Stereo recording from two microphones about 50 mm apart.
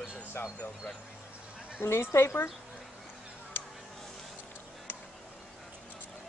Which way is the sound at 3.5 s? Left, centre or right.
Left.